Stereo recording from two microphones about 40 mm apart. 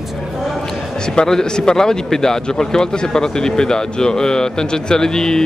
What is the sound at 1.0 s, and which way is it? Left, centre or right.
Speech, centre.